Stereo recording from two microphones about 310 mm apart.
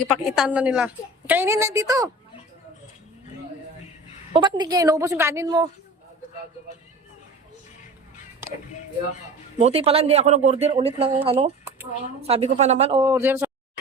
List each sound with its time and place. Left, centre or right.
0.1 s a woman's voice: centre
4.3 s a woman's voice: centre
8.4 s music: centre
9.6 s a woman's voice: centre